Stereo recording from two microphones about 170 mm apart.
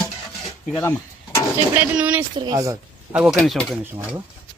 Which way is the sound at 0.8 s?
15° left (ahead or behind).